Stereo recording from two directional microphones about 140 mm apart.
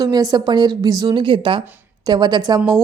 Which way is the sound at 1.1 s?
40° right (ahead or behind).